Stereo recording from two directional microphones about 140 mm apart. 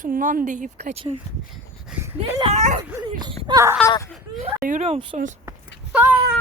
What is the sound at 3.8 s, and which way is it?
Speech, 10° left (ahead or behind).